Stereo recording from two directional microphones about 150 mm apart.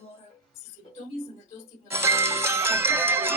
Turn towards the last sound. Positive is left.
turn(degrees=-15)  # may be behind; listen again after turning